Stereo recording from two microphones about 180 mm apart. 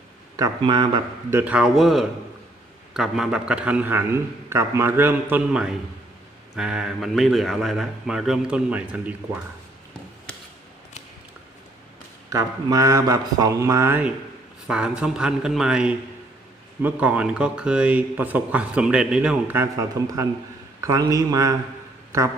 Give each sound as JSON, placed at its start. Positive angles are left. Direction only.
{"t": 0.3, "sound": "speech", "side_deg": -20}
{"t": 1.3, "sound": "speech", "side_deg": -10}
{"t": 12.3, "sound": "speech", "side_deg": -20}